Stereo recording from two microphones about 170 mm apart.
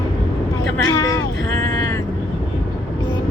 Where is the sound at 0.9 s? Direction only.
15° left (ahead or behind).